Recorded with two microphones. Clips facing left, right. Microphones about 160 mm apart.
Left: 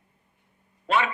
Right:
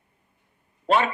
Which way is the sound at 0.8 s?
35° right (ahead or behind).